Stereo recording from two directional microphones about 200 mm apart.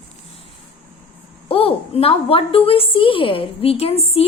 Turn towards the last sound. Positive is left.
turn(degrees=30)  # may be behind; listen again after turning